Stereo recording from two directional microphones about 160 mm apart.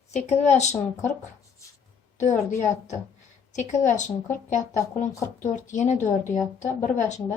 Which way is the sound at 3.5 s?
50° left (ahead or behind).